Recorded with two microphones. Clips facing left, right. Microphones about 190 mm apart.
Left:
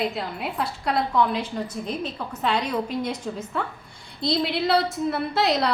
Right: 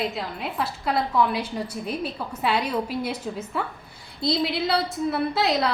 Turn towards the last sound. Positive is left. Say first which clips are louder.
# even
turn(degrees=0)  # may be behind; listen again after turning